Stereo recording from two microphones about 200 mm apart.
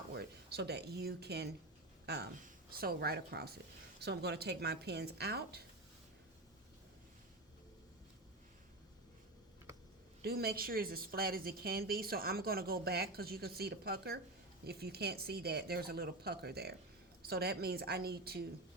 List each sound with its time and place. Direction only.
0.1 s a woman's voice: 55° right (ahead or behind)
10.2 s a woman's voice: 50° right (ahead or behind)